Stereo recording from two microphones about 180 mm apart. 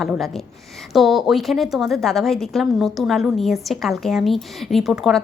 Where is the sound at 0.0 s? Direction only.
Centre (ahead or behind).